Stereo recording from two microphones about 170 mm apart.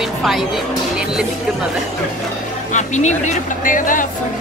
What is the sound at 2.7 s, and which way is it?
Speech, 45° left (ahead or behind).